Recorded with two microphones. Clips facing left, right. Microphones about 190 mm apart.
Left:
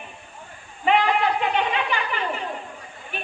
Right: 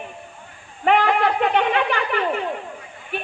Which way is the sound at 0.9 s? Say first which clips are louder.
Right 2 dB; 60° right (ahead or behind).